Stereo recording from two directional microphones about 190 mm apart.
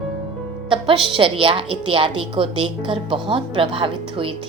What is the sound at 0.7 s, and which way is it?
A woman's voice, 25° right (ahead or behind).